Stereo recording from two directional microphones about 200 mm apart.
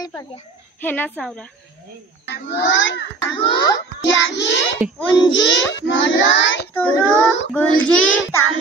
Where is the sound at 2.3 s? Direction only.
55° left (ahead or behind).